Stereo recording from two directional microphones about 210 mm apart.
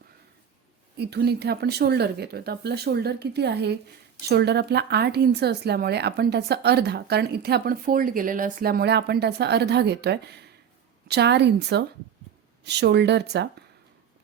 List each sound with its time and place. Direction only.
0.9 s a woman's voice: 50° right (ahead or behind)